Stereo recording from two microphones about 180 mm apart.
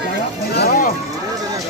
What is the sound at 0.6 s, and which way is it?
Speech, 55° left (ahead or behind).